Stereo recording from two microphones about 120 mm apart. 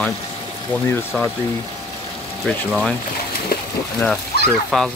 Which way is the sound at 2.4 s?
5° left (ahead or behind).